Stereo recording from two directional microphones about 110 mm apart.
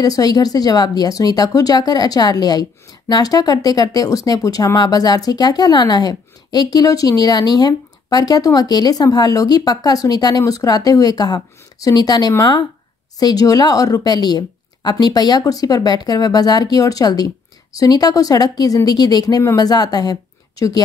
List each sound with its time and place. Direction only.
0.0 s speech: 35° left (ahead or behind)